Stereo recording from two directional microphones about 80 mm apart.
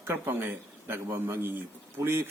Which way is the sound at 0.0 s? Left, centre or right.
Right.